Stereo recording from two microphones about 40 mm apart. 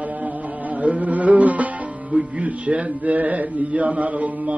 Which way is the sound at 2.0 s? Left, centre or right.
Centre.